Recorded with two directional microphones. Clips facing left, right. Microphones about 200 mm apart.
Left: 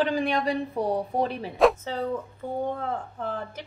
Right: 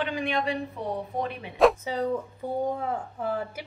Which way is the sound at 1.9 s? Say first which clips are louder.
Right 1 dB; 10° right (ahead or behind).